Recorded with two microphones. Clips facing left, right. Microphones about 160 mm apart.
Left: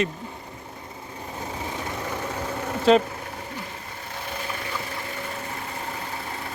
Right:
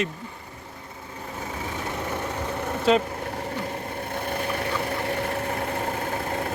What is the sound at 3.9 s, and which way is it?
Vehicle, 55° right (ahead or behind).